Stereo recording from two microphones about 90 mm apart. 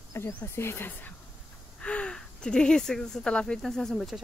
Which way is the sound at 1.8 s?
10° left (ahead or behind).